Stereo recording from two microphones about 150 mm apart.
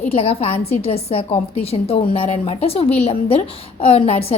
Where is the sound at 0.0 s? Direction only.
40° left (ahead or behind).